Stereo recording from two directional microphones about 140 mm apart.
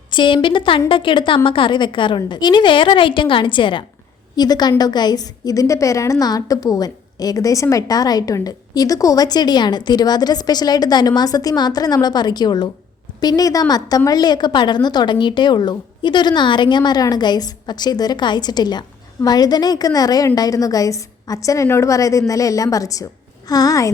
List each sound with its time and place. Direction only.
0.1 s a woman's voice: 35° left (ahead or behind)